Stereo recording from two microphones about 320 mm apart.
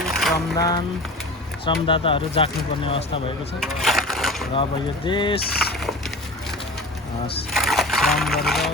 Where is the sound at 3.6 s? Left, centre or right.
Centre.